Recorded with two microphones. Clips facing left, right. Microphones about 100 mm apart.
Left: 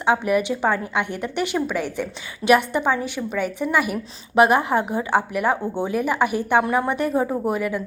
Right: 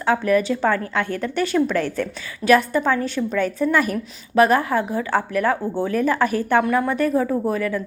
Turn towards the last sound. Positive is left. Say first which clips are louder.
# right 1 dB
turn(degrees=15)  # may be behind; listen again after turning